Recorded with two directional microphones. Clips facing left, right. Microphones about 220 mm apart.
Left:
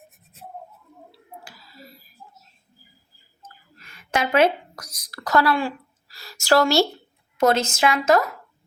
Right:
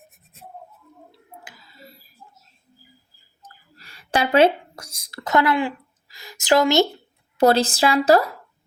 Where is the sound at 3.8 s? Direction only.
35° right (ahead or behind).